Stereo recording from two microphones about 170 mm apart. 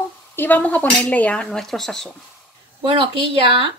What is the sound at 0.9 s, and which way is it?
Speech, 5° left (ahead or behind).